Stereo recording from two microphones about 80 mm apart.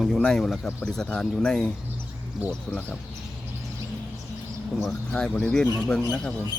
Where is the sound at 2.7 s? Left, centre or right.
Left.